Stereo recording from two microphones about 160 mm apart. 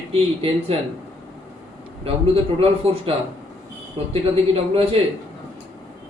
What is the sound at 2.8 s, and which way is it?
Speech, 35° right (ahead or behind).